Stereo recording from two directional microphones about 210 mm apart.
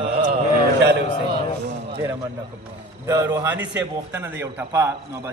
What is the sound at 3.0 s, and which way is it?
Music, 15° right (ahead or behind).